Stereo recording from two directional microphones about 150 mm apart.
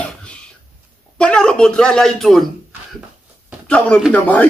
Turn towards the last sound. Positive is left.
turn(degrees=10)  # may be behind; listen again after turning